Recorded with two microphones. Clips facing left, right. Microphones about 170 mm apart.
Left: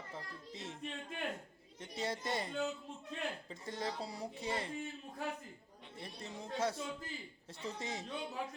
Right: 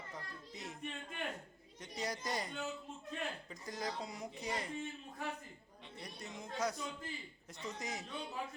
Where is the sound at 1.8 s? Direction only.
25° left (ahead or behind).